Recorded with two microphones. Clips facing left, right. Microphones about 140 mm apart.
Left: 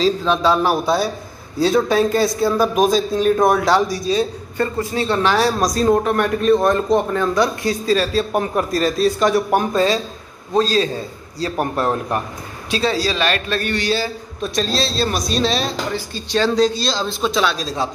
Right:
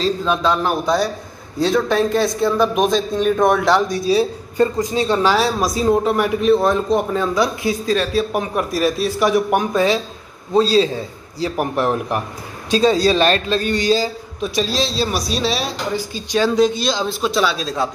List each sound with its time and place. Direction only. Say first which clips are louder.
0.3 s a man's voice: left 1 dB; 5° left (ahead or behind)
4.1 s a woman's voice: right 2 dB; 10° right (ahead or behind)
5.4 s a man's voice: left 1 dB; 5° right (ahead or behind)
9.6 s a woman's voice: even; 15° right (ahead or behind)
11.4 s a woman's voice: right 1 dB; 15° right (ahead or behind)
13.1 s a man's voice: right 4 dB; 30° right (ahead or behind)
13.6 s a woman's voice: right 3 dB; 15° right (ahead or behind)
14.4 s a woman's voice: right 1 dB; 5° right (ahead or behind)